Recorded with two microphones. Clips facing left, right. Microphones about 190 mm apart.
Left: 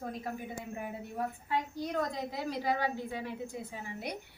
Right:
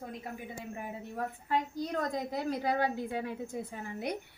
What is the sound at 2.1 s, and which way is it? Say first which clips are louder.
Speech: right 3 dB; 50° right (ahead or behind).